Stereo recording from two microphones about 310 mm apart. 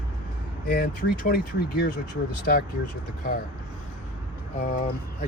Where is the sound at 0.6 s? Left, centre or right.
Left.